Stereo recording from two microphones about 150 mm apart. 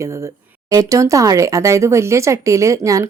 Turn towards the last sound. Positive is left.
turn(degrees=-20)  # may be behind; listen again after turning